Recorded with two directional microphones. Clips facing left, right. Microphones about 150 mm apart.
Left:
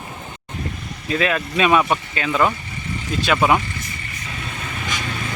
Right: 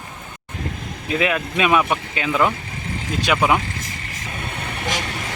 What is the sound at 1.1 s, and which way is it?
Speech, 15° right (ahead or behind).